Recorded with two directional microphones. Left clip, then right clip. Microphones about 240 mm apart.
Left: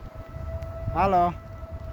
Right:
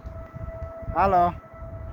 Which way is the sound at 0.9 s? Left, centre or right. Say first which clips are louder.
Right 2 dB; centre.